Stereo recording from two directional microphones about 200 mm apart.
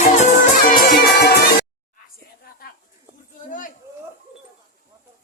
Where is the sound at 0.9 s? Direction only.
55° left (ahead or behind).